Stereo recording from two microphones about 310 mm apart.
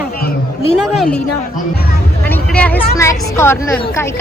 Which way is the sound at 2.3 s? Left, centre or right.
Centre.